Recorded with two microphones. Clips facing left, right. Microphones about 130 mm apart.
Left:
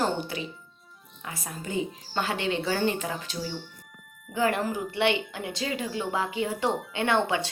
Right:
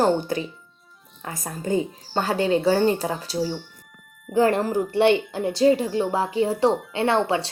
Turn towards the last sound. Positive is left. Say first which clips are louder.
# right 4 dB
turn(degrees=-35)  # may be behind; listen again after turning